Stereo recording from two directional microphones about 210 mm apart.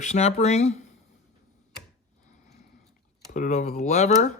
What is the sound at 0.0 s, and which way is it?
Speech, 30° left (ahead or behind).